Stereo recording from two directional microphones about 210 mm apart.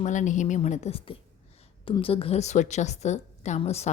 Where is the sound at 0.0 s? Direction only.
35° left (ahead or behind).